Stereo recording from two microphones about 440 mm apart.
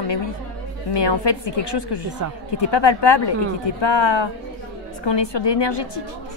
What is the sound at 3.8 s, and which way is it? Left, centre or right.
Speech, left.